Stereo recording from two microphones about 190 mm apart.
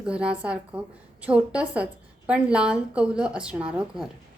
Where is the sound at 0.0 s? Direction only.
5° right (ahead or behind).